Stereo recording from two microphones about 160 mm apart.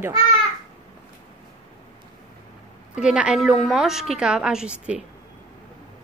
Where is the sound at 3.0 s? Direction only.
5° right (ahead or behind).